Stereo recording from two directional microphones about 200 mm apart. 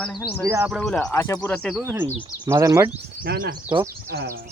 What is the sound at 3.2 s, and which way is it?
Speech, 50° right (ahead or behind).